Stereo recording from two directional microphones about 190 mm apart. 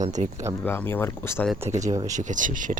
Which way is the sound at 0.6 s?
10° left (ahead or behind).